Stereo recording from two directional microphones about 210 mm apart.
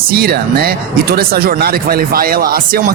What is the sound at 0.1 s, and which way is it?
Speech, 45° right (ahead or behind).